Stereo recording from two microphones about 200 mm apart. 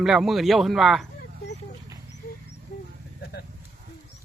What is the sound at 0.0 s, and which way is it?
Speech, 5° right (ahead or behind).